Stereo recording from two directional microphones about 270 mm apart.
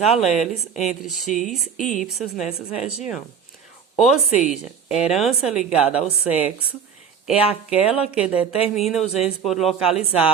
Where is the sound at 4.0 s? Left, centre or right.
Centre.